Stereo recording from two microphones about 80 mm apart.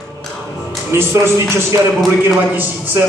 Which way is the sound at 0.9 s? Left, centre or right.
Right.